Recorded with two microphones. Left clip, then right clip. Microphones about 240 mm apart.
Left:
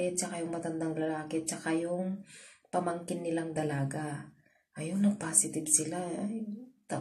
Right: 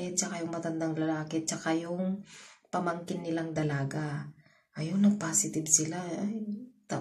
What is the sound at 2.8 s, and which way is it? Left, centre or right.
Speech, centre.